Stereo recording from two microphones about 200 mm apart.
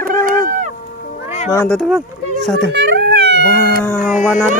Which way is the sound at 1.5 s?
10° left (ahead or behind).